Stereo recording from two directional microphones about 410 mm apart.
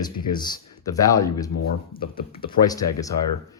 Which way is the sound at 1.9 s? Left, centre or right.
Left.